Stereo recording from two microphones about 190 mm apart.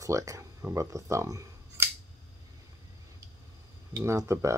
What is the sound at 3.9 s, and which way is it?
Speech, 15° right (ahead or behind).